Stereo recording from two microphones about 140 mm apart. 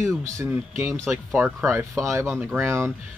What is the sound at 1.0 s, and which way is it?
Speech, centre (ahead or behind).